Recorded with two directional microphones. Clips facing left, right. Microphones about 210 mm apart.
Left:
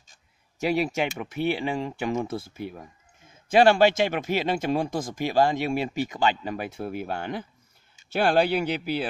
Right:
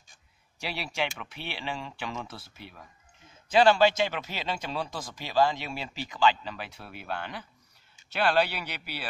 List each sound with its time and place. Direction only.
0.6 s a man's voice: 50° left (ahead or behind)